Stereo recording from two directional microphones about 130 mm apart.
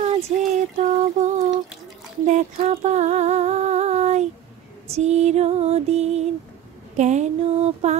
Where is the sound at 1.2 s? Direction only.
65° right (ahead or behind).